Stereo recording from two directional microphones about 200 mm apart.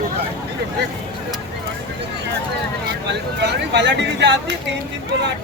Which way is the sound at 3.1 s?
60° right (ahead or behind).